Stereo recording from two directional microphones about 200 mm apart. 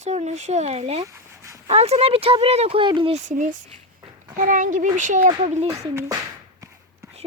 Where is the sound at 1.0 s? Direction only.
15° right (ahead or behind).